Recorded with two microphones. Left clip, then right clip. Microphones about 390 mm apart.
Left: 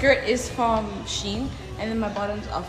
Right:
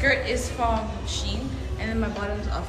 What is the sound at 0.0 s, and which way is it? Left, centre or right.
A woman's voice, centre.